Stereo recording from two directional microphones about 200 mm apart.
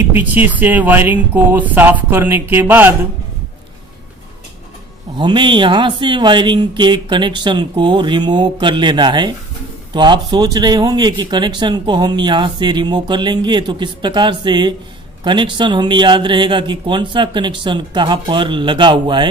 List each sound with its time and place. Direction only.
0.1 s speech: 10° right (ahead or behind)
5.1 s speech: 25° right (ahead or behind)